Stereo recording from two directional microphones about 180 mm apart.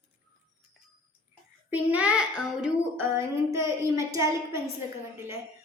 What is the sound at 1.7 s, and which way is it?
A child's voice, 10° right (ahead or behind).